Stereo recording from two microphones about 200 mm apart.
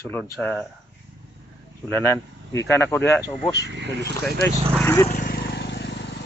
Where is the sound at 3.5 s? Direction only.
60° right (ahead or behind).